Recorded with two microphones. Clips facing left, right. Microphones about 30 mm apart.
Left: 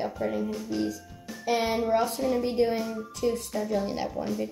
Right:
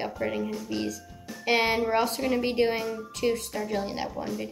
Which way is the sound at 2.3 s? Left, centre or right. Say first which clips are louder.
Right 1 dB; right.